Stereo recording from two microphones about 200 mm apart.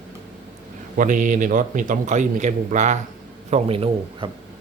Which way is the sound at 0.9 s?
40° right (ahead or behind).